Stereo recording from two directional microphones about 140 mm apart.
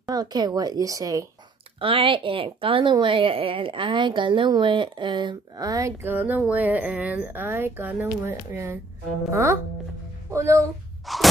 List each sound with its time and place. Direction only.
0.0 s a woman's voice: 30° right (ahead or behind)
1.8 s a woman's voice: 40° right (ahead or behind); by 10.6 s 20° right (ahead or behind)
11.1 s a sound: centre (ahead or behind)